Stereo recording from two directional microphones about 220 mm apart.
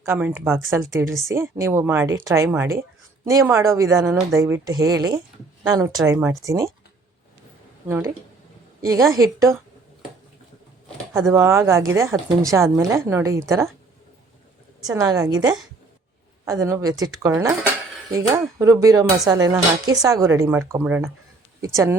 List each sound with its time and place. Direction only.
0.0 s speech: 10° right (ahead or behind)
7.9 s speech: 10° right (ahead or behind)
11.3 s speech: 10° right (ahead or behind)
14.9 s speech: 15° right (ahead or behind)